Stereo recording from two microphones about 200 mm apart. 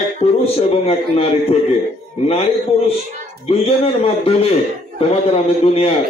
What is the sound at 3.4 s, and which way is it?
Speech, 30° left (ahead or behind).